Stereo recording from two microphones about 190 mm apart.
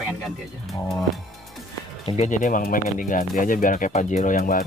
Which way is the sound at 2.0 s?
35° left (ahead or behind).